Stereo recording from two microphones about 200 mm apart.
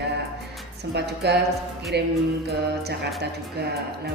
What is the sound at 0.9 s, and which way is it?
Speech, 55° right (ahead or behind).